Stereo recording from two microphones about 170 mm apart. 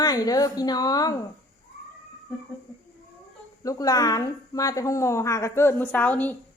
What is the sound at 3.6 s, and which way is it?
A woman's voice, 20° left (ahead or behind).